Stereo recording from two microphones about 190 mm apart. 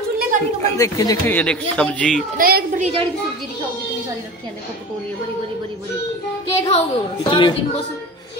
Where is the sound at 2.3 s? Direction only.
50° right (ahead or behind).